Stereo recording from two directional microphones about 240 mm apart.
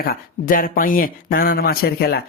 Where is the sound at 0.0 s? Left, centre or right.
Left.